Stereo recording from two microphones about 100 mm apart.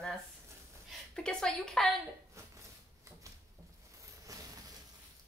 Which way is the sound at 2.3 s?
30° right (ahead or behind).